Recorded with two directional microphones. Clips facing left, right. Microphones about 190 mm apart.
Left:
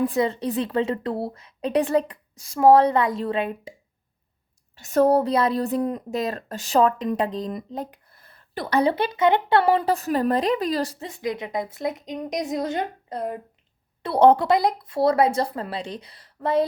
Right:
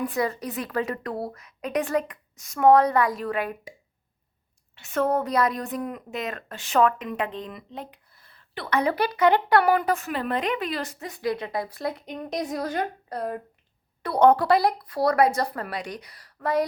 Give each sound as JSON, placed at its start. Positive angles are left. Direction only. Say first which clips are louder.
{"t": 0.0, "sound": "a woman's voice", "louder": "left 4 dB", "side_deg": 25}
{"t": 4.7, "sound": "a woman's voice", "louder": "left 6 dB", "side_deg": 40}